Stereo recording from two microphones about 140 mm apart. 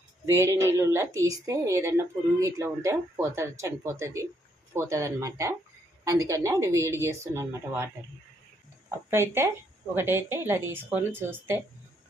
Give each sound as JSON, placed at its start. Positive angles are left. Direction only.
{"t": 0.3, "sound": "a woman's voice", "side_deg": -20}
{"t": 9.0, "sound": "a woman's voice", "side_deg": -15}